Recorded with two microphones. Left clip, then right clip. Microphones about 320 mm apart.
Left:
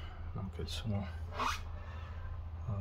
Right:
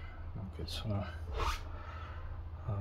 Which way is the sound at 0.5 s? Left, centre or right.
Centre.